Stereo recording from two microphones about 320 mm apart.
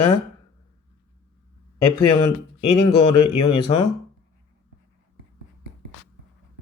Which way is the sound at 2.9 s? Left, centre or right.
Centre.